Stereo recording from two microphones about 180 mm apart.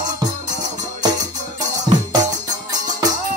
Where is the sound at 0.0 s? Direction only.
20° right (ahead or behind).